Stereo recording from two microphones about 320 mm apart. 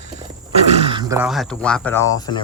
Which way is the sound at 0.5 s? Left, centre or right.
Centre.